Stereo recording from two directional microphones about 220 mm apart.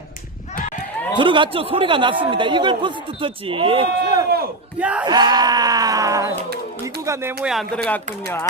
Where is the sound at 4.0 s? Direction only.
45° right (ahead or behind).